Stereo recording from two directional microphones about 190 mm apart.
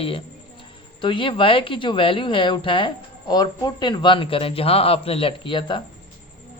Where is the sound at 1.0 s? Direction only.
25° left (ahead or behind).